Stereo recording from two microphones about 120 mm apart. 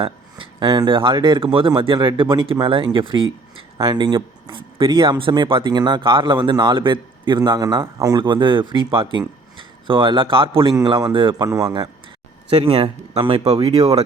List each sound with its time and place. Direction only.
0.0 s speech: 40° right (ahead or behind)
11.4 s speech: 25° right (ahead or behind)
12.5 s speech: 55° right (ahead or behind)